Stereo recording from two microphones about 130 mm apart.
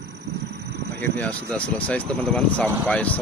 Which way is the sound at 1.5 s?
10° left (ahead or behind).